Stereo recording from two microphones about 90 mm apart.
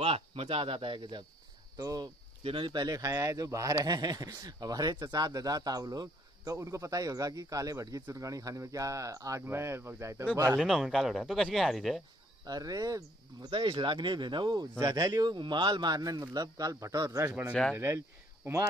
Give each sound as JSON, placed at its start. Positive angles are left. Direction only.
{"t": 0.0, "sound": "speech", "side_deg": -90}
{"t": 1.8, "sound": "speech", "side_deg": -45}
{"t": 2.4, "sound": "speech", "side_deg": -70}
{"t": 10.6, "sound": "speech", "side_deg": 0}
{"t": 12.4, "sound": "speech", "side_deg": -45}
{"t": 13.5, "sound": "speech", "side_deg": -65}
{"t": 17.7, "sound": "speech", "side_deg": -25}